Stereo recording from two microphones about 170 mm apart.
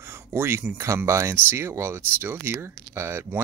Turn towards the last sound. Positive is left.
turn(degrees=-15)  # may be behind; listen again after turning